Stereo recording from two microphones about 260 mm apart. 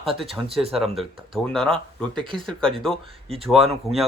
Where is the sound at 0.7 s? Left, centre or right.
Centre.